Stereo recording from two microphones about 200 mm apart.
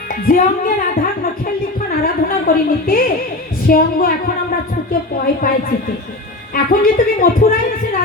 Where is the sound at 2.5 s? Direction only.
45° left (ahead or behind).